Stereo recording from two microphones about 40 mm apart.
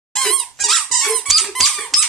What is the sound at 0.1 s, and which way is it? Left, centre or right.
Squeak, centre.